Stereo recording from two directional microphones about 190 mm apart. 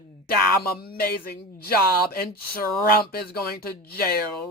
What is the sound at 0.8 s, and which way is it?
Speech, 50° left (ahead or behind).